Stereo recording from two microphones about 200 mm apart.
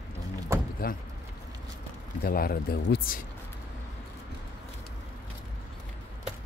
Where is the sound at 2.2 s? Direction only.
50° left (ahead or behind).